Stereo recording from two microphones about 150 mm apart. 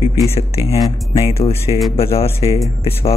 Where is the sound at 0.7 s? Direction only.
25° left (ahead or behind).